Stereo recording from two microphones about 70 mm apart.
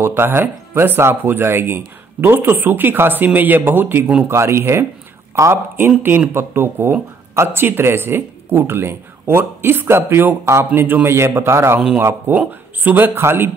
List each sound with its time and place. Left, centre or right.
0.0 s speech: right
4.2 s speech: right
10.7 s speech: right
12.3 s speech: right